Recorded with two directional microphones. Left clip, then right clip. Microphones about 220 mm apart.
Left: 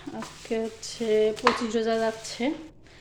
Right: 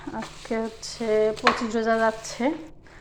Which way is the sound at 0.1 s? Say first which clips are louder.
Right 1 dB; 10° left (ahead or behind).